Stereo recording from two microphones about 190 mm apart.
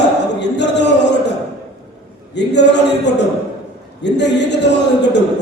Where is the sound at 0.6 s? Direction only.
65° left (ahead or behind).